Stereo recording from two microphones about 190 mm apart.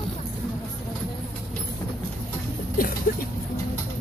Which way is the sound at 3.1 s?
45° left (ahead or behind).